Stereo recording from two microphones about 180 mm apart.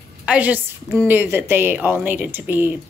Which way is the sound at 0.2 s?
10° right (ahead or behind).